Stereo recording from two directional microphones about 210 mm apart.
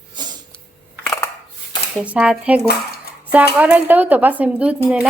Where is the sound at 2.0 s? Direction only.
5° right (ahead or behind).